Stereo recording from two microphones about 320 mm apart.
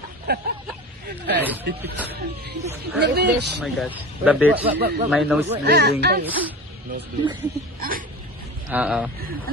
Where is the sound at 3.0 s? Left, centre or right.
Right.